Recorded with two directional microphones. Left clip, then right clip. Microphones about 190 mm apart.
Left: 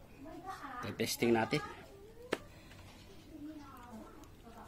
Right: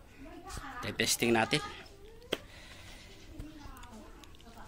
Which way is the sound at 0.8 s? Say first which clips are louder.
Right 4 dB; centre (ahead or behind).